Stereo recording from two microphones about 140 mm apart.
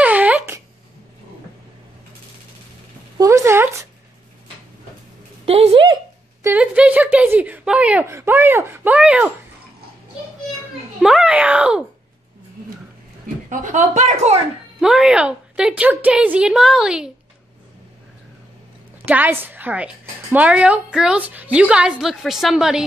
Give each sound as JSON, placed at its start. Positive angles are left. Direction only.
{"t": 0.0, "sound": "wail", "side_deg": -10}
{"t": 3.2, "sound": "speech", "side_deg": -20}
{"t": 5.4, "sound": "a woman's voice", "side_deg": -45}
{"t": 6.4, "sound": "speech", "side_deg": -10}
{"t": 11.0, "sound": "a woman's voice", "side_deg": -5}
{"t": 13.5, "sound": "speech", "side_deg": -65}
{"t": 14.8, "sound": "a woman's voice", "side_deg": -5}
{"t": 19.0, "sound": "a woman's voice", "side_deg": -15}